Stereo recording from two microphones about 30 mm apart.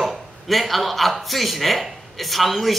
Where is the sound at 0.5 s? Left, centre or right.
Centre.